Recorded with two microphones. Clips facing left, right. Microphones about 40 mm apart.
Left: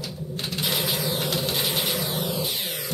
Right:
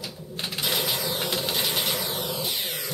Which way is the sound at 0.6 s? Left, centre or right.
Centre.